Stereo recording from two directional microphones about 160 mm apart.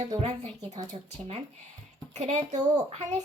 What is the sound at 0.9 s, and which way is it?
A woman's voice, 45° right (ahead or behind).